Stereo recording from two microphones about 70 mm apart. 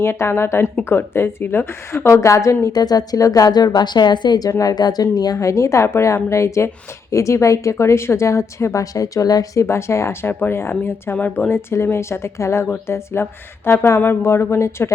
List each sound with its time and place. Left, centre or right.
0.0 s speech: left
2.7 s a woman's voice: left
5.4 s a woman's voice: left
9.6 s speech: left